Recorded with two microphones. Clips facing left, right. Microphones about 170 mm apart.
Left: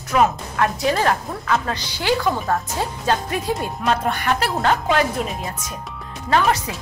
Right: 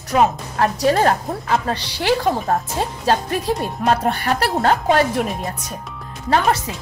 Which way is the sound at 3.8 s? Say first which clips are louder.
Right 2 dB; 40° right (ahead or behind).